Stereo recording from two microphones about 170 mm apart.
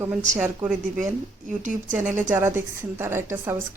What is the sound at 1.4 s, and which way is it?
Speech, 50° right (ahead or behind).